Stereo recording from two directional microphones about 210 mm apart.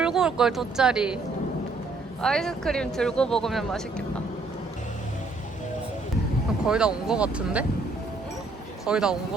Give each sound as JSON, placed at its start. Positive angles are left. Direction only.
{"t": 0.0, "sound": "speech", "side_deg": -5}
{"t": 2.2, "sound": "speech", "side_deg": 5}
{"t": 6.7, "sound": "speech", "side_deg": -5}
{"t": 8.9, "sound": "speech", "side_deg": -5}